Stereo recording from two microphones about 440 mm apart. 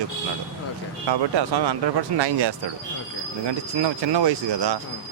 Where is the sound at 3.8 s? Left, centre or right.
Right.